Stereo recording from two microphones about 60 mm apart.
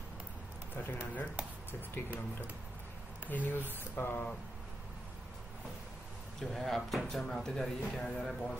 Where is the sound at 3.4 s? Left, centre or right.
Left.